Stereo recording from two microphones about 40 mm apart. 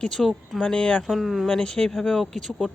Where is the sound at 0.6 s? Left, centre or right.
Left.